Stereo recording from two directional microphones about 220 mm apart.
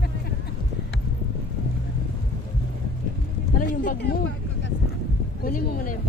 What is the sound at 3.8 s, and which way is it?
Speech, 45° left (ahead or behind).